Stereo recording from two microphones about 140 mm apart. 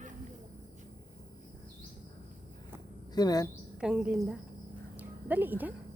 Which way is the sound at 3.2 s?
25° left (ahead or behind).